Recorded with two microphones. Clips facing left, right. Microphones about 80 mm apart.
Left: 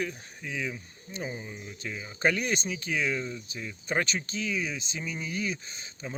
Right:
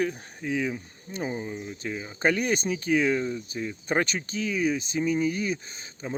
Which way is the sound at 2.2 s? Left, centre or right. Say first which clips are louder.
Right 3 dB; right.